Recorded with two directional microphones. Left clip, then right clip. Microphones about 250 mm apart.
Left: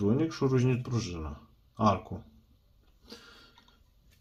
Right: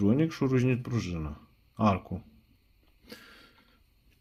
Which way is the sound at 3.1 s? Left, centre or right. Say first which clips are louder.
Right 1 dB; right.